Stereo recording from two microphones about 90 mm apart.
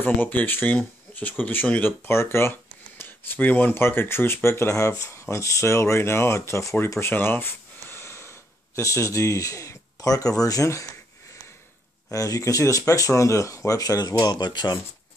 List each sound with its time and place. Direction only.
0.0 s speech: 20° left (ahead or behind); by 10.9 s 35° left (ahead or behind)
12.1 s speech: 40° left (ahead or behind)